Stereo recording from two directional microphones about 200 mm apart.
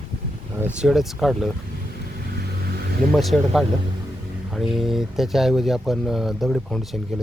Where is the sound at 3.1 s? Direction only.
Centre (ahead or behind).